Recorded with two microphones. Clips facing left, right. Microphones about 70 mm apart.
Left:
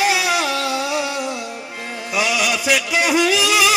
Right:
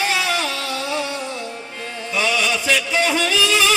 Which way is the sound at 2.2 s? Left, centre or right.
Centre.